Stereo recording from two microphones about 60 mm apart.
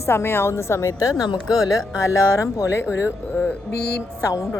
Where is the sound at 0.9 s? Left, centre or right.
Left.